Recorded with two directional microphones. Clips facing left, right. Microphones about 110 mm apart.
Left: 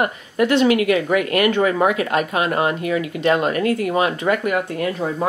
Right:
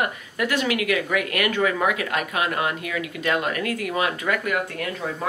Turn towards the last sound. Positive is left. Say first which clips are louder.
# left 6 dB
turn(degrees=25)  # may be behind; listen again after turning